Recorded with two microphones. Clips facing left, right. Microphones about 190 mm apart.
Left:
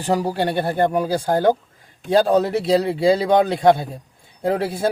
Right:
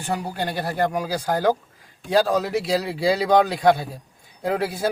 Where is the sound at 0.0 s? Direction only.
35° left (ahead or behind).